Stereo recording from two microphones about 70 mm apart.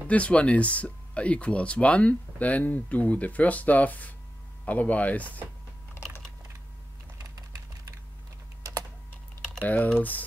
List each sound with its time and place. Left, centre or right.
0.1 s speech: centre
7.2 s typing: right
9.7 s speech: left